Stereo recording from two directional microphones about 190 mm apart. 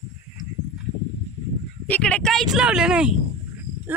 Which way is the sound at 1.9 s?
5° left (ahead or behind).